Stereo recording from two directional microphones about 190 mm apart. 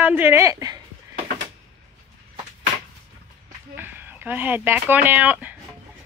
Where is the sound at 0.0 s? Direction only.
10° right (ahead or behind).